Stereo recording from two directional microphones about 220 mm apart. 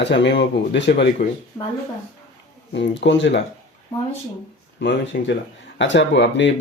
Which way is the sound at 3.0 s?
55° left (ahead or behind).